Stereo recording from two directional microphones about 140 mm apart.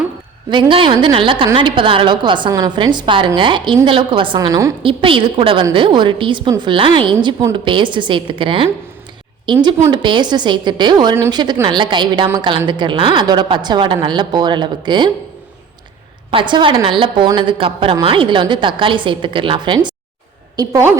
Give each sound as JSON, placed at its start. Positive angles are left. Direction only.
{"t": 0.7, "sound": "a woman's voice", "side_deg": -40}
{"t": 4.4, "sound": "a woman's voice", "side_deg": -25}
{"t": 4.8, "sound": "a woman's voice", "side_deg": -40}
{"t": 16.3, "sound": "a woman's voice", "side_deg": -35}
{"t": 20.6, "sound": "a woman's voice", "side_deg": -20}